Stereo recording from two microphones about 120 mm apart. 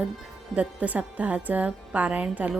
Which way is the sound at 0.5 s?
10° right (ahead or behind).